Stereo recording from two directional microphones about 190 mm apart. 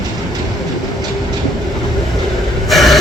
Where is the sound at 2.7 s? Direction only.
Centre (ahead or behind).